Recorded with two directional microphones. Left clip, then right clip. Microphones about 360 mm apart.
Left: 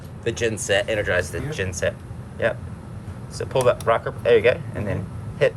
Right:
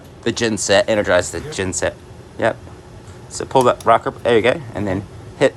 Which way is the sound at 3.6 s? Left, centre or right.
Centre.